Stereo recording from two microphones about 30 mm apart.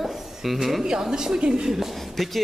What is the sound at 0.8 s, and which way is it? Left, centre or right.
A woman's voice, right.